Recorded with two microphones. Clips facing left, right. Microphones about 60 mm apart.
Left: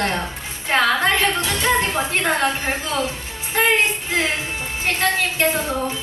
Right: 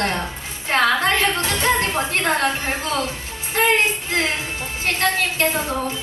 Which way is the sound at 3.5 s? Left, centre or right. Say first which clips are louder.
Even; centre.